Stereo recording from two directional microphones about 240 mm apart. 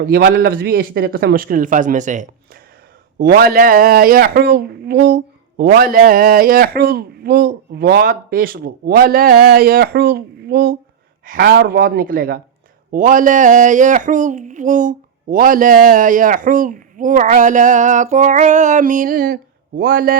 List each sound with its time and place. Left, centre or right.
0.0 s speech: right